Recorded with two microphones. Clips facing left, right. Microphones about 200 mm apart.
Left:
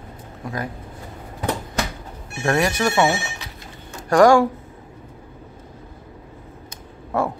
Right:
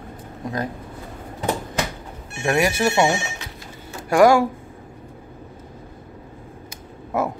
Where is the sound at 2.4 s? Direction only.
20° right (ahead or behind).